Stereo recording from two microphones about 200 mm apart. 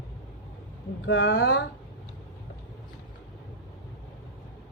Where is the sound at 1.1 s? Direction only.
65° left (ahead or behind).